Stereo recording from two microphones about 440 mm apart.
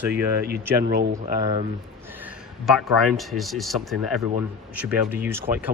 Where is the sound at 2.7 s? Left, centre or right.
Centre.